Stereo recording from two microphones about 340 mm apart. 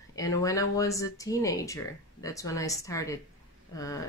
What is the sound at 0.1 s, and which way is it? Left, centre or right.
Speech, centre.